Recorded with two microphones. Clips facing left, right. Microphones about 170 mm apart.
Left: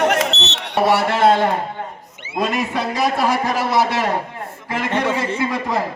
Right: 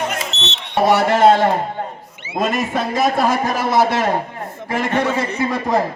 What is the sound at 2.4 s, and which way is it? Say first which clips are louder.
A man's voice: right 1 dB; 45° right (ahead or behind).